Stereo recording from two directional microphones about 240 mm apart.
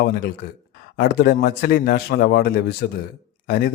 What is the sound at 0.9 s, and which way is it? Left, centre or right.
A man's voice, left.